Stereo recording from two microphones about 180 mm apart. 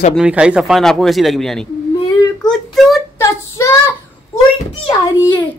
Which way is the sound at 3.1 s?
15° left (ahead or behind).